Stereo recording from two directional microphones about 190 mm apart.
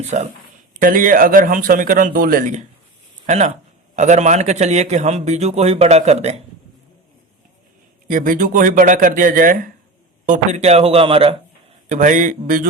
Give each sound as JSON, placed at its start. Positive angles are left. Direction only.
{"t": 0.1, "sound": "a man's voice", "side_deg": -40}
{"t": 8.0, "sound": "a man's voice", "side_deg": -45}
{"t": 11.9, "sound": "speech", "side_deg": -40}